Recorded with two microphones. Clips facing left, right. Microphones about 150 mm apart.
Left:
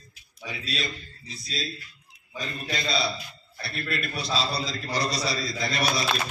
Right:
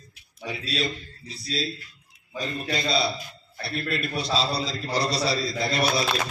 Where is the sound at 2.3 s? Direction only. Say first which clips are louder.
Right 4 dB; 35° right (ahead or behind).